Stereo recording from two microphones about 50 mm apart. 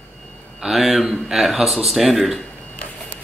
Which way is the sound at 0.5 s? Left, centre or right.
Centre.